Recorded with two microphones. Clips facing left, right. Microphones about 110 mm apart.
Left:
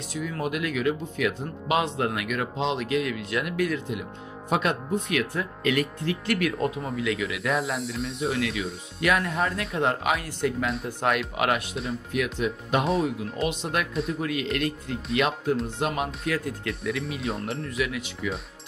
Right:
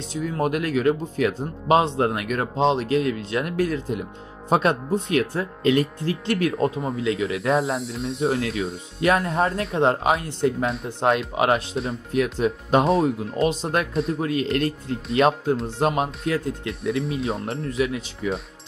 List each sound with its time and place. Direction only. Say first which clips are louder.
0.1 s speech: right 4 dB; 30° right (ahead or behind)
0.4 s speech: right 6 dB; 40° right (ahead or behind)
7.8 s speech: right 2 dB; centre (ahead or behind)
8.2 s speech: right 5 dB; 30° right (ahead or behind)
17.2 s speech: right 4 dB; centre (ahead or behind)
17.5 s speech: right 4 dB; 30° right (ahead or behind)